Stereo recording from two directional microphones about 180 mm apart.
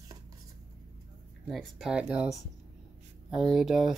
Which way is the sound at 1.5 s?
Centre (ahead or behind).